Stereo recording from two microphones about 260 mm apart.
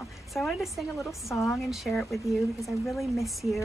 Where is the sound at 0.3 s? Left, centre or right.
Centre.